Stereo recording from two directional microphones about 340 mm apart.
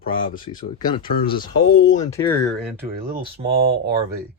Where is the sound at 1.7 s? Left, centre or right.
Left.